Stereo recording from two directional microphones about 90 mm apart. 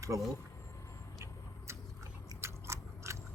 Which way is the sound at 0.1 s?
40° right (ahead or behind).